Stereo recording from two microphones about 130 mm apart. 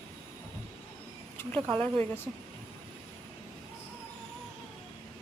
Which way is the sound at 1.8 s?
15° left (ahead or behind).